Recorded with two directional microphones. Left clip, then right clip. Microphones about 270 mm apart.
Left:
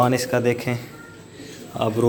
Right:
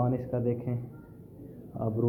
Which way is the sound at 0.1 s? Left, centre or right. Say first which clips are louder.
Left 11 dB; centre.